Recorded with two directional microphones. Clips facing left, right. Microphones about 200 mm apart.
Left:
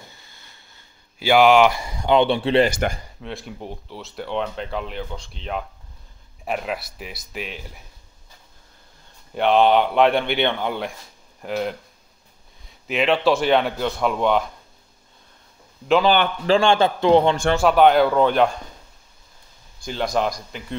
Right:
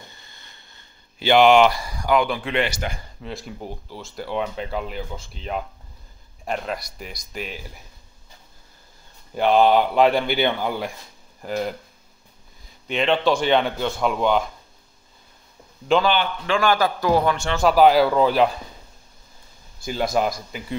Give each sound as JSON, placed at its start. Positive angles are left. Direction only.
{"t": 0.0, "sound": "a sound", "side_deg": 5}
{"t": 1.7, "sound": "speech", "side_deg": 20}
{"t": 2.7, "sound": "speech", "side_deg": 55}
{"t": 3.2, "sound": "speech", "side_deg": 0}
{"t": 9.3, "sound": "speech", "side_deg": 0}
{"t": 15.9, "sound": "speech", "side_deg": 0}
{"t": 16.4, "sound": "speech", "side_deg": 25}
{"t": 17.6, "sound": "speech", "side_deg": 0}
{"t": 19.8, "sound": "speech", "side_deg": -5}